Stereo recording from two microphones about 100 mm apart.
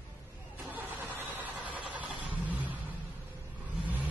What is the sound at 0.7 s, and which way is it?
Vehicle, 20° right (ahead or behind).